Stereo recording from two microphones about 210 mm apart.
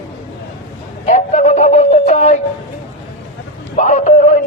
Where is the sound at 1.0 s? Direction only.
35° left (ahead or behind).